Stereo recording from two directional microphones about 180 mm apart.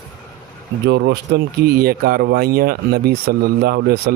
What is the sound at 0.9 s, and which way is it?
Speech, 70° right (ahead or behind).